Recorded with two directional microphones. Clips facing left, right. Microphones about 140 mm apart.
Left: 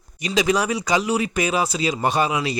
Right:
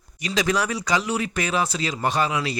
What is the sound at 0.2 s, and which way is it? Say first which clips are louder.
Speech: left 3 dB; 15° left (ahead or behind).